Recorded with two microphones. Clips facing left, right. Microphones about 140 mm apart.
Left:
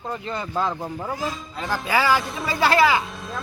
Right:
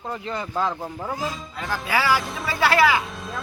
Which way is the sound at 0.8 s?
Centre (ahead or behind).